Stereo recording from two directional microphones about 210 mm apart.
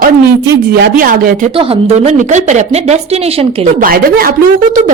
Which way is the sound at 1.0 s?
40° right (ahead or behind).